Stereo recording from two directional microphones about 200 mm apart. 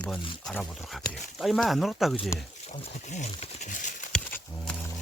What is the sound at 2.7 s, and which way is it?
Speech, 35° left (ahead or behind).